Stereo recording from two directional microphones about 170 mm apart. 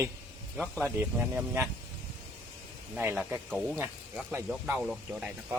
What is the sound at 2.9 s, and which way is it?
Speech, 10° right (ahead or behind).